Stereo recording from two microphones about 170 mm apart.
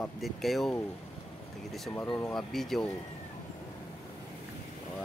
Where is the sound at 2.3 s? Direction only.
Centre (ahead or behind).